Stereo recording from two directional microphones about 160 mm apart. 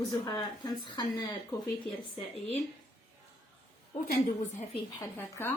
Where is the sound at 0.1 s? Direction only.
25° left (ahead or behind).